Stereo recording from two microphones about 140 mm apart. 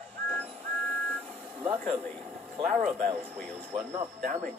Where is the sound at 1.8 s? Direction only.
5° left (ahead or behind).